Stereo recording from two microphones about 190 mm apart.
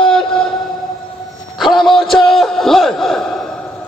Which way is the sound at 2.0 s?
5° left (ahead or behind).